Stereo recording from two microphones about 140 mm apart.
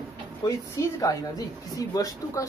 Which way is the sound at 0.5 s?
25° left (ahead or behind).